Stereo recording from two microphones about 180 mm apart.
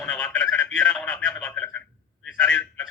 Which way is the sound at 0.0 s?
5° left (ahead or behind).